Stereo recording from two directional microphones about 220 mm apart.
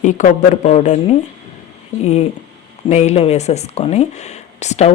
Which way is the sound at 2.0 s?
30° left (ahead or behind).